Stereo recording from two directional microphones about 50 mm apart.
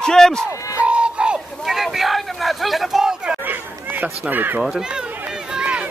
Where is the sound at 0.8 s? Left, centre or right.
Right.